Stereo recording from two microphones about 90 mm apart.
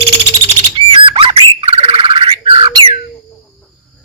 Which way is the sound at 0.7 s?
70° right (ahead or behind).